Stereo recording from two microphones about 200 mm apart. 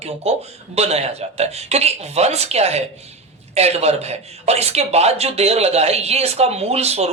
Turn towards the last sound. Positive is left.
turn(degrees=-30)  # may be behind; listen again after turning